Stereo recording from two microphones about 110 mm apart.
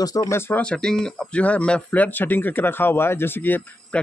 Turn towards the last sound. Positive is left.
turn(degrees=15)  # may be behind; listen again after turning